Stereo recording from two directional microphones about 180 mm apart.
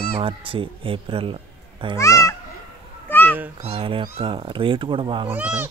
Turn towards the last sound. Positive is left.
turn(degrees=-10)  # may be behind; listen again after turning